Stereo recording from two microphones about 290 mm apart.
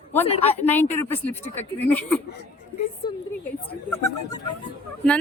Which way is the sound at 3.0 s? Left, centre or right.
Centre.